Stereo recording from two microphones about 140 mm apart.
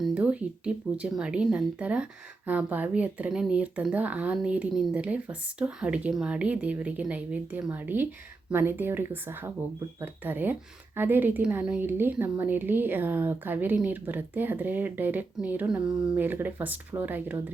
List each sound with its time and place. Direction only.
0.0 s a woman's voice: 10° right (ahead or behind)